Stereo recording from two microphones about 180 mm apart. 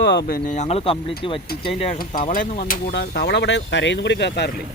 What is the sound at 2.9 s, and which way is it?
Speech, 60° left (ahead or behind).